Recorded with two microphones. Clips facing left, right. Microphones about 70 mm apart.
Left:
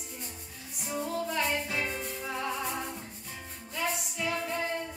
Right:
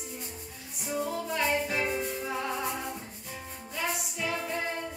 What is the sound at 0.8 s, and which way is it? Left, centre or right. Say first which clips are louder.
Music: right 1 dB; centre.